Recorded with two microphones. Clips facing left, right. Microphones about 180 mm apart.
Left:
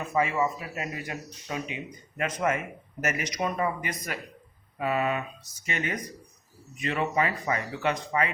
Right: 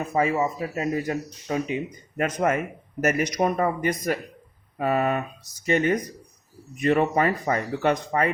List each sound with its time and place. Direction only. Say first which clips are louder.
0.1 s speech: right 2 dB; 35° right (ahead or behind); by 8.3 s 50° right (ahead or behind)